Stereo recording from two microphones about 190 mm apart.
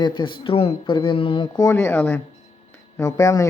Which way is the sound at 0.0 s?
25° left (ahead or behind).